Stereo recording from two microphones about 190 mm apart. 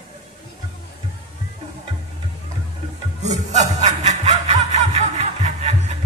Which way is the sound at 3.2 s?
35° right (ahead or behind).